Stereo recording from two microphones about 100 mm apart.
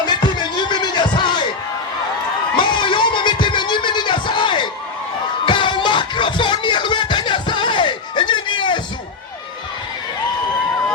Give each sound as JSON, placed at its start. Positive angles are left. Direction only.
{"t": 0.0, "sound": "music", "side_deg": 45}
{"t": 2.6, "sound": "music", "side_deg": 55}